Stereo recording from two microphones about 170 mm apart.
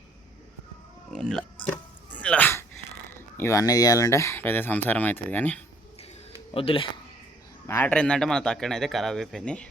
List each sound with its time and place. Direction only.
1.1 s speech: 5° left (ahead or behind)
2.1 s dog: 10° left (ahead or behind)
3.3 s speech: 15° left (ahead or behind)
6.5 s speech: 35° left (ahead or behind)
7.7 s speech: 10° left (ahead or behind)